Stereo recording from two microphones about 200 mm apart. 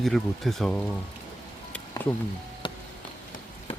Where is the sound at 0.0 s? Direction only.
Centre (ahead or behind).